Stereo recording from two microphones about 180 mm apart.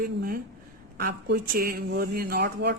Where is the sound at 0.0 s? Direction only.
55° right (ahead or behind).